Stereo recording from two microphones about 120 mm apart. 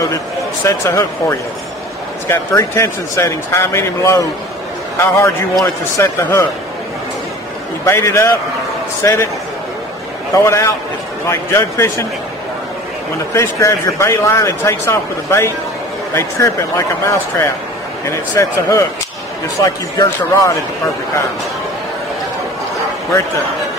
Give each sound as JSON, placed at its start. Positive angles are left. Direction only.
{"t": 0.7, "sound": "a man's voice", "side_deg": 25}
{"t": 7.8, "sound": "a man's voice", "side_deg": 25}
{"t": 10.3, "sound": "a man's voice", "side_deg": 25}
{"t": 13.3, "sound": "a man's voice", "side_deg": 25}
{"t": 18.0, "sound": "a man's voice", "side_deg": 25}